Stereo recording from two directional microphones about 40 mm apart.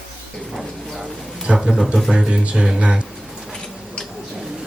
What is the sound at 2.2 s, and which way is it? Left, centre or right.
Speech, right.